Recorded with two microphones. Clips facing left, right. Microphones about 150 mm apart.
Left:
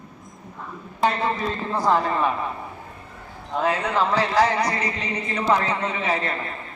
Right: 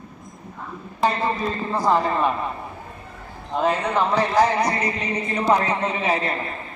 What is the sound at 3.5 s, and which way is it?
A man's voice, 20° right (ahead or behind).